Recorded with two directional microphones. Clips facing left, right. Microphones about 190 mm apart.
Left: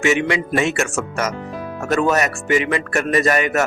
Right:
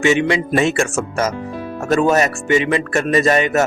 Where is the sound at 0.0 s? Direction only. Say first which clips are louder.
Right 3 dB; 30° right (ahead or behind).